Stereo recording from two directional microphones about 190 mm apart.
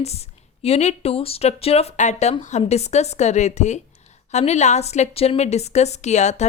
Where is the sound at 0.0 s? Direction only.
35° left (ahead or behind).